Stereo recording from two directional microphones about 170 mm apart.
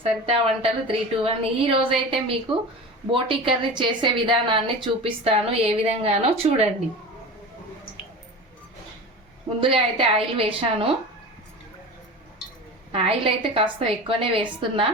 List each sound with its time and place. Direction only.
0.0 s a woman's voice: 35° right (ahead or behind)
9.6 s a woman's voice: 30° right (ahead or behind)
12.9 s a woman's voice: 35° right (ahead or behind)